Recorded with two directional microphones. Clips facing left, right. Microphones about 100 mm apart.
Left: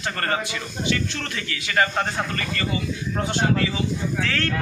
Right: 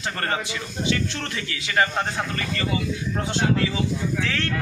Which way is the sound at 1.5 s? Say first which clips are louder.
Even; 25° right (ahead or behind).